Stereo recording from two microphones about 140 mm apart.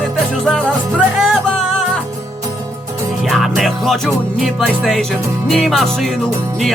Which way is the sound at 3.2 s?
Centre (ahead or behind).